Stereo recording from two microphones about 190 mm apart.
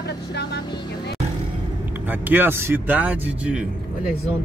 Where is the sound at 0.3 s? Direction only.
60° left (ahead or behind).